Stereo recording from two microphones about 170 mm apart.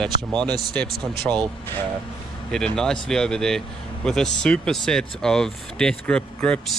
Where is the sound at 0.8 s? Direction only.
65° right (ahead or behind).